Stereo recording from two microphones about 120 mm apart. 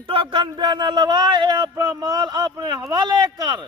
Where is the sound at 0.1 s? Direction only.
45° right (ahead or behind).